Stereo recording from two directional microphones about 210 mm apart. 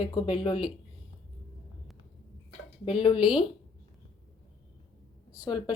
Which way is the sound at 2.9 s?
25° left (ahead or behind).